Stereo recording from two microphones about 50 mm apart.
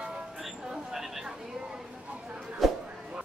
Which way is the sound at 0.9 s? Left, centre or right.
Centre.